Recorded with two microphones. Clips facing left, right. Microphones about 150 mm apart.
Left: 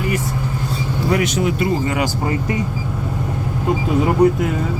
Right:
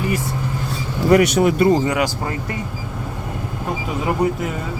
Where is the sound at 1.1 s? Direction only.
50° right (ahead or behind).